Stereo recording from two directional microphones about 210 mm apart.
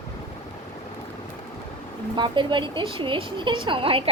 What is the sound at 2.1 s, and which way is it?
A woman's voice, 20° right (ahead or behind).